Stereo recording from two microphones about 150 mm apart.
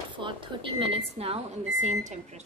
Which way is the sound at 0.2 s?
35° right (ahead or behind).